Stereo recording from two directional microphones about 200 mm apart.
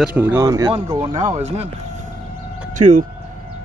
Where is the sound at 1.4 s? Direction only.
30° right (ahead or behind).